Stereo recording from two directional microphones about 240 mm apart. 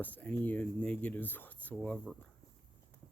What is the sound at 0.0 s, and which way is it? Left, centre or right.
Speech, centre.